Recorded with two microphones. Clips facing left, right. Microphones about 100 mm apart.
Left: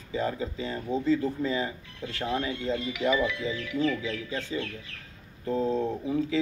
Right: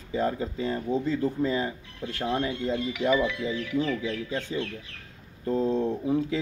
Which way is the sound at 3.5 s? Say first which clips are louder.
Right 1 dB; 20° right (ahead or behind).